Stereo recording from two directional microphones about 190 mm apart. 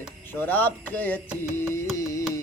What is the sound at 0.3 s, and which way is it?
Female singing, 10° left (ahead or behind).